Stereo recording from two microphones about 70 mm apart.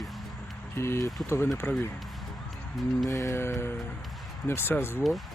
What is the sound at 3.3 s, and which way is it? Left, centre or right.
Speech, left.